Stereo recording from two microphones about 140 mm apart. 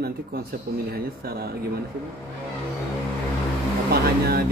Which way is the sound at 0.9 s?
90° right.